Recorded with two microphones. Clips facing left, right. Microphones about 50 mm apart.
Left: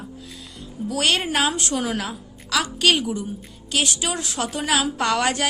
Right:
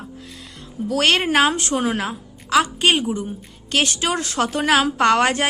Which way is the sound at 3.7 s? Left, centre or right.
Right.